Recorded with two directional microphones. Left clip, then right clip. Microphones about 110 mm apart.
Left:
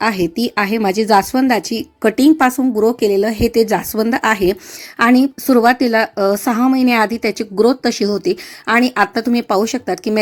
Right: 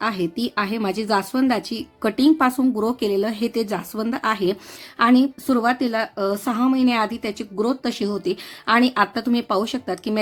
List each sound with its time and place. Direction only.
0.0 s speech: 40° left (ahead or behind)
2.6 s a woman's voice: 20° left (ahead or behind)